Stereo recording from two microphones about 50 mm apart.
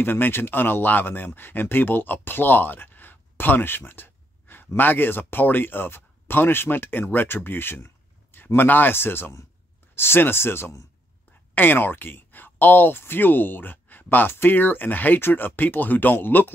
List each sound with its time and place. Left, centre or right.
0.0 s speech: left
11.5 s speech: left